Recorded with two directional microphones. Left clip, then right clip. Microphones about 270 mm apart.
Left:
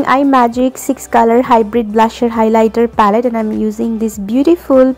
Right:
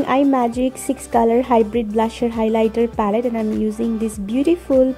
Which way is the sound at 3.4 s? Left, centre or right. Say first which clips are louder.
Left 5 dB; centre.